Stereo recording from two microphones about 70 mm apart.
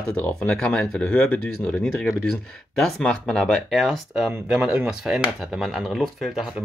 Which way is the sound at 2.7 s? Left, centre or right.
Centre.